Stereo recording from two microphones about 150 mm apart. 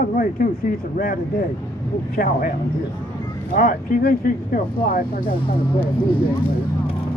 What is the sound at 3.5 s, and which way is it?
Speech, 70° left (ahead or behind).